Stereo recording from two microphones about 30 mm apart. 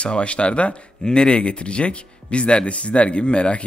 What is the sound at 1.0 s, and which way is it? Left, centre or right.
Speech, left.